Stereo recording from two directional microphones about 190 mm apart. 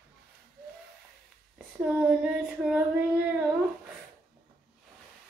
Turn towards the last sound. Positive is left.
turn(degrees=-5)  # may be behind; listen again after turning